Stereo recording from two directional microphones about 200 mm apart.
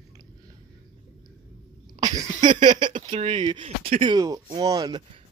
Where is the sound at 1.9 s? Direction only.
20° right (ahead or behind).